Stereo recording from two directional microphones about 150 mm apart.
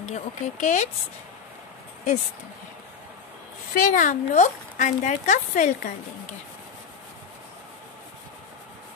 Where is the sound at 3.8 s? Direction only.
65° left (ahead or behind).